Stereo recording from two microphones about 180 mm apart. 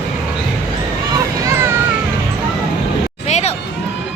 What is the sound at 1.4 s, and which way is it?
Music, 15° right (ahead or behind).